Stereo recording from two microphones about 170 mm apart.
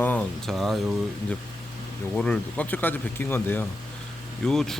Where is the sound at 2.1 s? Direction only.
5° left (ahead or behind).